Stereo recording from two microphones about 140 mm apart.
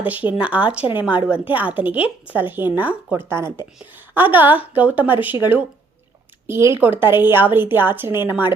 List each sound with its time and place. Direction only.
0.0 s a woman's voice: 10° right (ahead or behind)